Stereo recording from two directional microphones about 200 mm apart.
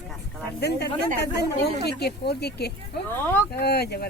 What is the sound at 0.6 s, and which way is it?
Speech, 55° left (ahead or behind).